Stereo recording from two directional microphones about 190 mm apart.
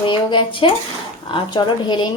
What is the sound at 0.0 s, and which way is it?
A woman's voice, 25° left (ahead or behind).